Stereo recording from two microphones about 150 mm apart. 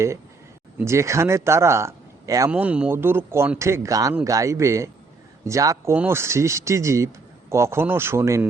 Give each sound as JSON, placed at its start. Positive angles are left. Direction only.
{"t": 0.8, "sound": "speech", "side_deg": -20}
{"t": 2.5, "sound": "speech", "side_deg": -10}